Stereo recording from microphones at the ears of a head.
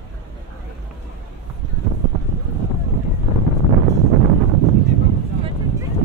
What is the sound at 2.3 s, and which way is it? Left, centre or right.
Boat, right.